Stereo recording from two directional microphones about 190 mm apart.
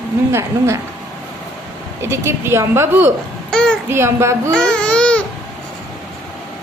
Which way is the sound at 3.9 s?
15° right (ahead or behind).